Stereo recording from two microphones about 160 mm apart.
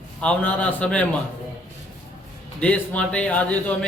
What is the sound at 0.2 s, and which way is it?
Speech, 5° left (ahead or behind).